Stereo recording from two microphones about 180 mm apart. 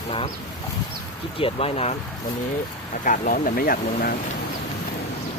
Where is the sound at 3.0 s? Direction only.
45° left (ahead or behind).